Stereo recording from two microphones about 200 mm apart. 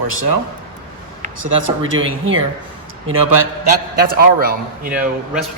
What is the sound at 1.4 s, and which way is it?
Speech, 80° right.